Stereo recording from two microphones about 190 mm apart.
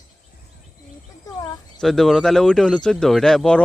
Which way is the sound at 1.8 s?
Centre (ahead or behind).